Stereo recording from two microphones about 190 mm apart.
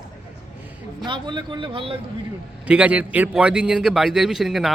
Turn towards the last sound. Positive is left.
turn(degrees=0)  # may be behind; listen again after turning